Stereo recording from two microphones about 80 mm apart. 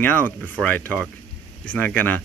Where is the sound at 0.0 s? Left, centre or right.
Left.